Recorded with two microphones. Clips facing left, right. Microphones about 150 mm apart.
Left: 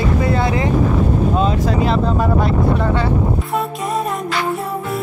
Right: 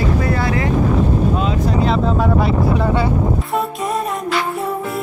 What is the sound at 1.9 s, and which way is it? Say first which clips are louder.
Speech: even; centre (ahead or behind).